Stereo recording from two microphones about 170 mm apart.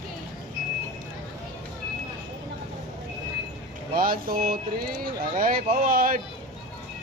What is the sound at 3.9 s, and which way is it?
Speech, 60° right (ahead or behind).